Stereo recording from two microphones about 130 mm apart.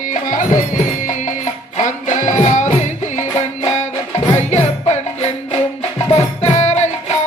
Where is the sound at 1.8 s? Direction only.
70° left (ahead or behind).